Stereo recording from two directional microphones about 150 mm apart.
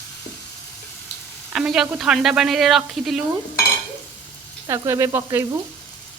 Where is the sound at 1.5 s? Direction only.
5° right (ahead or behind).